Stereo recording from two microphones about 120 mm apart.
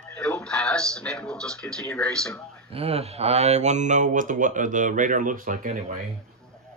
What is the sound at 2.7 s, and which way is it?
Speech, 55° right (ahead or behind).